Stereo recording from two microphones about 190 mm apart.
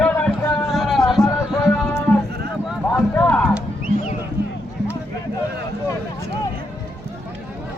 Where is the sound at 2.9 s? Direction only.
10° left (ahead or behind).